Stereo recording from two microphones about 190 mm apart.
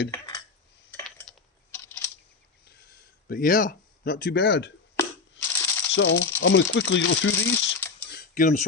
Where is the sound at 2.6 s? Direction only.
55° left (ahead or behind).